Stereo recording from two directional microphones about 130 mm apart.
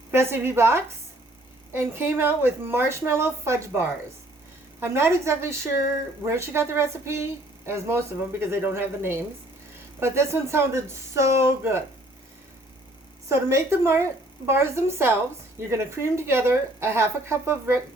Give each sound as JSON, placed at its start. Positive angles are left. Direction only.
{"t": 0.1, "sound": "a woman's voice", "side_deg": -20}
{"t": 13.2, "sound": "a woman's voice", "side_deg": -20}